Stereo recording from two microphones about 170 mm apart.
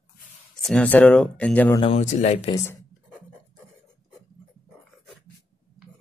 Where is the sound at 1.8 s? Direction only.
35° left (ahead or behind).